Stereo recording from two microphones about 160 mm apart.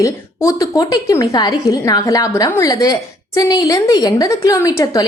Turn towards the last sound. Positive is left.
turn(degrees=20)  # may be behind; listen again after turning